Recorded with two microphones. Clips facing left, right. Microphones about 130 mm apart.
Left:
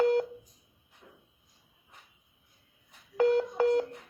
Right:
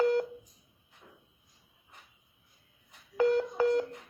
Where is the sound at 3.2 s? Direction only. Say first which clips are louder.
Left 1 dB; 55° left (ahead or behind).